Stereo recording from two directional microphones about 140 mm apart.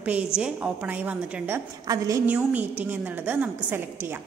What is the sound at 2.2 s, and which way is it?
A woman's voice, 10° right (ahead or behind).